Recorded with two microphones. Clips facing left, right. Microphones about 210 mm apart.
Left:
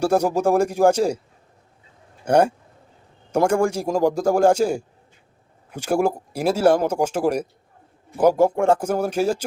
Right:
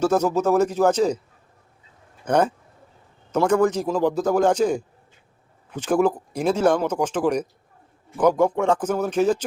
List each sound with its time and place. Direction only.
0.0 s speech: 10° left (ahead or behind)
2.2 s speech: 10° left (ahead or behind)
3.5 s speech: 10° left (ahead or behind)
3.8 s speech: 45° left (ahead or behind)
4.1 s speech: 10° left (ahead or behind)